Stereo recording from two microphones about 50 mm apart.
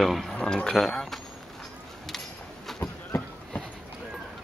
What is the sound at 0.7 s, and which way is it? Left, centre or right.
Speech, centre.